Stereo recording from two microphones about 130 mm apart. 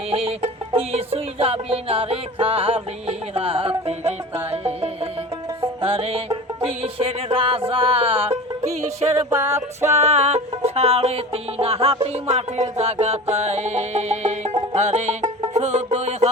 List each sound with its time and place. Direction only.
0.1 s music: 50° right (ahead or behind)
9.3 s music: 20° right (ahead or behind)
9.9 s music: 55° right (ahead or behind)